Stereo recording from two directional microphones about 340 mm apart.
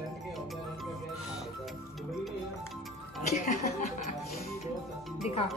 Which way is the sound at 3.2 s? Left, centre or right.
Left.